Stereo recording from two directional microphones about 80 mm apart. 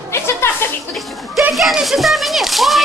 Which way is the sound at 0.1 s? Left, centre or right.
Left.